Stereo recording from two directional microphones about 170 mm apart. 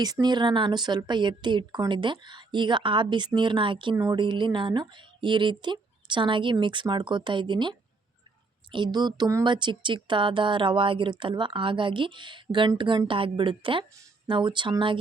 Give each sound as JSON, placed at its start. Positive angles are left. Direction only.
{"t": 0.0, "sound": "speech", "side_deg": -25}